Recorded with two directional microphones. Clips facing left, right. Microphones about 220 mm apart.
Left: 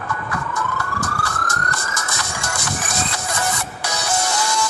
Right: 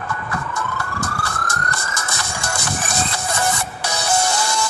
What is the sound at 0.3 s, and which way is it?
Emergency vehicle, 30° right (ahead or behind).